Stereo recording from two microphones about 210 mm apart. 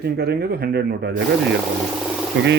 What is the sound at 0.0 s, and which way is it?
A man's voice, 50° right (ahead or behind).